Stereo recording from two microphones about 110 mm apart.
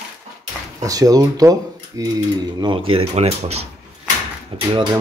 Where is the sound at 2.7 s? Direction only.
55° right (ahead or behind).